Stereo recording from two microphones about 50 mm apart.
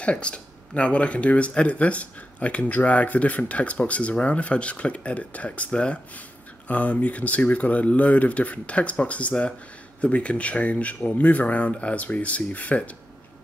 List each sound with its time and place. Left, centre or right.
0.0 s speech: left